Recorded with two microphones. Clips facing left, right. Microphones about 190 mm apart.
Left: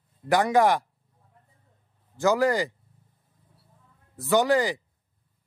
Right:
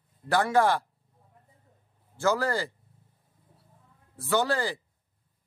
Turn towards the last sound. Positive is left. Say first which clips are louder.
# left 5 dB
turn(degrees=15)  # may be behind; listen again after turning